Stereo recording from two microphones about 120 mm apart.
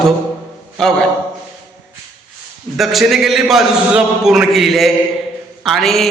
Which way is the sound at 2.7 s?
Centre (ahead or behind).